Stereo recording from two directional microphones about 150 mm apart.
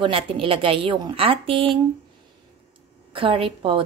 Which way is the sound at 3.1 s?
35° right (ahead or behind).